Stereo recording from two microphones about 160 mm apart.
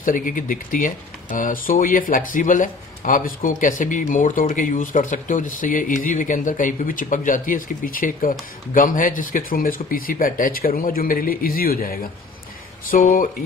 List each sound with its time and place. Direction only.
0.0 s speech: 60° left (ahead or behind)